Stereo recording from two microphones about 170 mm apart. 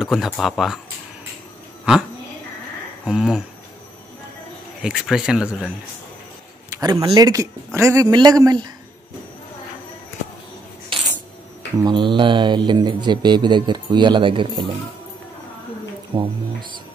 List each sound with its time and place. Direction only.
0.0 s speech: centre (ahead or behind)
3.1 s speech: 5° right (ahead or behind)
4.8 s speech: 5° right (ahead or behind)
6.7 s speech: 20° right (ahead or behind)
10.9 s a sound: 30° right (ahead or behind)
11.8 s speech: 30° right (ahead or behind)
16.2 s music: 25° right (ahead or behind)